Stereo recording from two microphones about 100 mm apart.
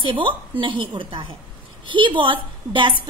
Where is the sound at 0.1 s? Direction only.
55° right (ahead or behind).